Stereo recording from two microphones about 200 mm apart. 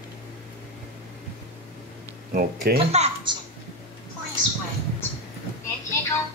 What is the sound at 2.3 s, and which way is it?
Speech, 45° right (ahead or behind).